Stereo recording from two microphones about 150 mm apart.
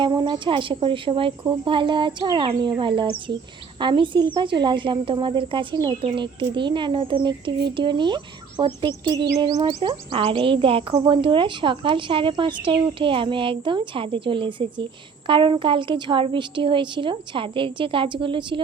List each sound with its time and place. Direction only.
0.0 s a woman's voice: 30° right (ahead or behind)